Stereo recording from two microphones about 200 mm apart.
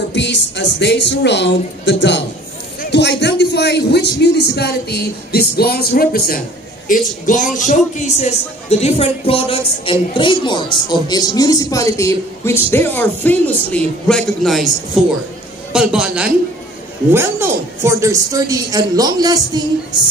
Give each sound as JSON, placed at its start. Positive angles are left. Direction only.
{"t": 0.1, "sound": "a man's voice", "side_deg": 60}
{"t": 15.7, "sound": "a man's voice", "side_deg": -5}